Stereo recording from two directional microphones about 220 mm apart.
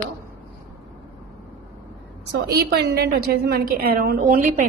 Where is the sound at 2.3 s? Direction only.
45° right (ahead or behind).